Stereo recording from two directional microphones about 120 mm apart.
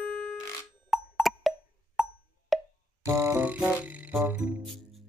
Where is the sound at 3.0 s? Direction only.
20° right (ahead or behind).